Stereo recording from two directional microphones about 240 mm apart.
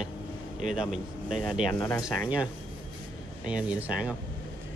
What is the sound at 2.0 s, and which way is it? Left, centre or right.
Speech, centre.